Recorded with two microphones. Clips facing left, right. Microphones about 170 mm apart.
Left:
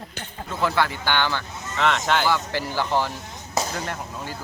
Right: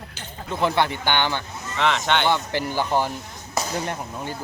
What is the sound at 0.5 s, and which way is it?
Speech, 20° right (ahead or behind).